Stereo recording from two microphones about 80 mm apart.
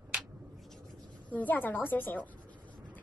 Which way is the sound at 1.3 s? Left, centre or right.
Left.